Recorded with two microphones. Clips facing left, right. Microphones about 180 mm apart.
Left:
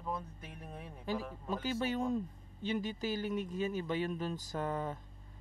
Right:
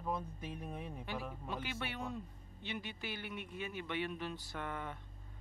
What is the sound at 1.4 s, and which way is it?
Speech, 40° left (ahead or behind).